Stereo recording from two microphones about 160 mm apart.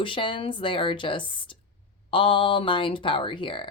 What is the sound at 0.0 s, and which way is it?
Speech, 30° left (ahead or behind).